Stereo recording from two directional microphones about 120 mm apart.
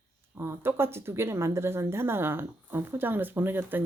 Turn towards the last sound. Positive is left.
turn(degrees=-15)  # may be behind; listen again after turning